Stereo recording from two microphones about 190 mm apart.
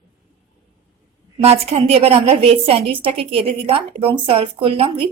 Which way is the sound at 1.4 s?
35° right (ahead or behind).